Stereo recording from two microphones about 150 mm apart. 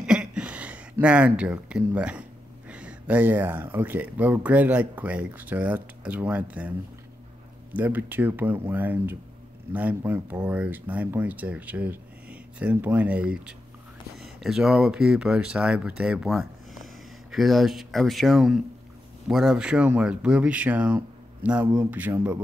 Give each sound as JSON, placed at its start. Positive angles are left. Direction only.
{"t": 0.0, "sound": "a sound", "side_deg": -5}
{"t": 2.7, "sound": "speech", "side_deg": -10}
{"t": 7.7, "sound": "speech", "side_deg": -10}